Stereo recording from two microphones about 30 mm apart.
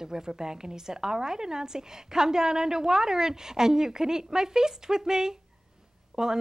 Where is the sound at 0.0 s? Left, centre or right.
Right.